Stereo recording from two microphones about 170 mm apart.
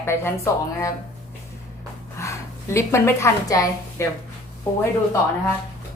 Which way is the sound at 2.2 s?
15° left (ahead or behind).